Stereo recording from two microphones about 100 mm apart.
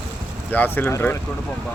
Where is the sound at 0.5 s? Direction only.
20° left (ahead or behind).